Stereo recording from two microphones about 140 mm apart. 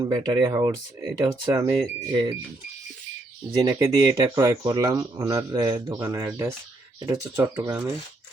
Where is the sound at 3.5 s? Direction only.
30° right (ahead or behind).